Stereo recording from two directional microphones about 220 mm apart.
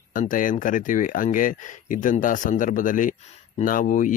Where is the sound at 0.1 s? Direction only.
35° left (ahead or behind).